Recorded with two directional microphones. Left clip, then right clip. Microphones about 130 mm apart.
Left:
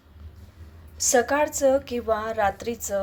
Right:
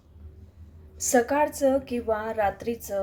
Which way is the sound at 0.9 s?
20° right (ahead or behind).